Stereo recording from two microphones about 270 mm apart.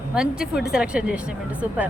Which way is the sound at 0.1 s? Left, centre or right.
Centre.